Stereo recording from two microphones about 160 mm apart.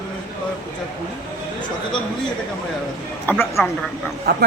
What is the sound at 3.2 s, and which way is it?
Speech, 15° left (ahead or behind).